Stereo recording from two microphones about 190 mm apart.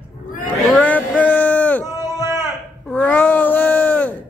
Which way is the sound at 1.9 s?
15° right (ahead or behind).